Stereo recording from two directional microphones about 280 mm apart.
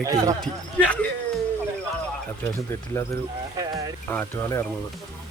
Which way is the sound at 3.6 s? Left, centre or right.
Centre.